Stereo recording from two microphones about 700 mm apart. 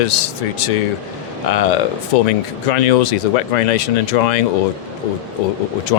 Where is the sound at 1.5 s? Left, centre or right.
Left.